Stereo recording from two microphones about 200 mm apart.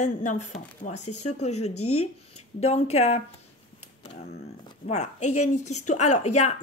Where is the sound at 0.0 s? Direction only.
35° left (ahead or behind).